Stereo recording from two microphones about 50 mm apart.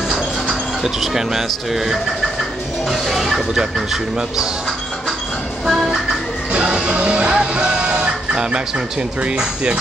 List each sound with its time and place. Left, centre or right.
0.1 s a sound: centre
2.9 s speech: centre
5.7 s music: centre
6.5 s music: centre